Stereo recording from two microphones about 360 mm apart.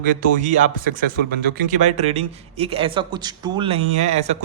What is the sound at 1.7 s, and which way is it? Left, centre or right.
A man's voice, centre.